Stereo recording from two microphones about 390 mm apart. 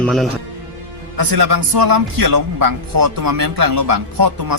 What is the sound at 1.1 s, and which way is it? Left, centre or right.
A man's voice, right.